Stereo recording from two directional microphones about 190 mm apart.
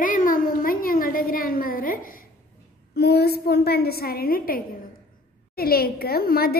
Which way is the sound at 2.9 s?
60° left (ahead or behind).